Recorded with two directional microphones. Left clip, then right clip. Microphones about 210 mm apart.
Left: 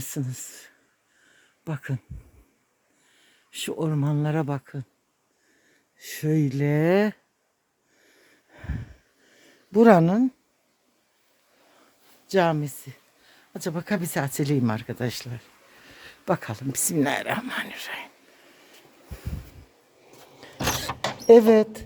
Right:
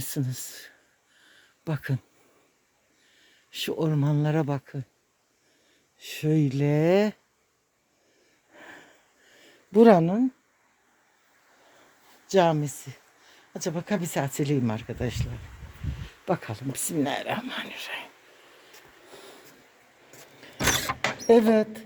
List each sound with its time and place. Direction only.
0.0 s speech: centre (ahead or behind)
3.2 s speech: centre (ahead or behind)
6.0 s speech: 10° left (ahead or behind)
8.5 s a sound: centre (ahead or behind)
10.0 s speech: 25° left (ahead or behind)
12.3 s speech: centre (ahead or behind); by 18.1 s 15° left (ahead or behind)
21.2 s speech: 15° left (ahead or behind)